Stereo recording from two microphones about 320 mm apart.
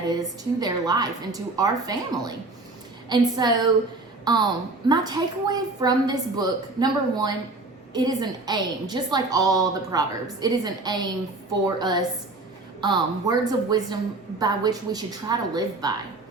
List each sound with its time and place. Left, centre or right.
0.6 s a woman's voice: centre